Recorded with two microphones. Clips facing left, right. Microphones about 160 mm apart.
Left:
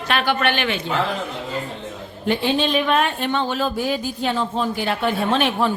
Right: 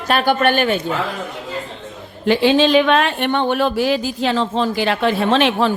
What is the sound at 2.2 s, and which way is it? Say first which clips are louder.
Speech: right 6 dB; 90° right.